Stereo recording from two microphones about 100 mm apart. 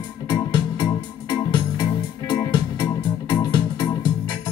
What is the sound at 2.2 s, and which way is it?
Music, 50° left (ahead or behind).